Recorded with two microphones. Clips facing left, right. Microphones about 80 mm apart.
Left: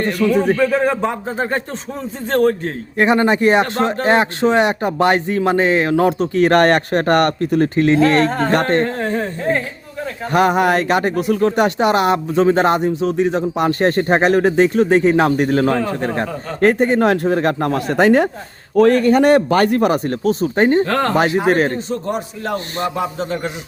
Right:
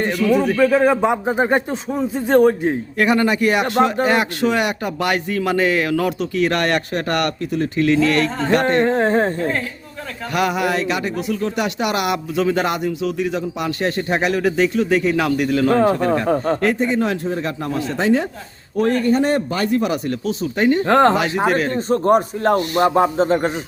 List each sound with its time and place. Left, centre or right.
0.5 s speech: centre
3.0 s speech: left
8.8 s speech: right
10.3 s speech: left
16.2 s a man's voice: right
16.6 s speech: left
18.8 s speech: left
20.8 s speech: right
21.5 s speech: left
21.8 s a man's voice: right